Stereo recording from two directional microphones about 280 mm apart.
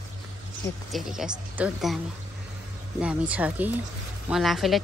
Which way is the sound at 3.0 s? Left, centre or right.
Centre.